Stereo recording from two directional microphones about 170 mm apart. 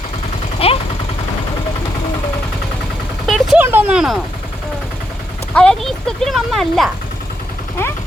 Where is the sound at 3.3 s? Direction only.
Centre (ahead or behind).